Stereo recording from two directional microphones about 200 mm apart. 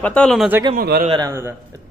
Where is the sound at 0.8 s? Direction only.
50° right (ahead or behind).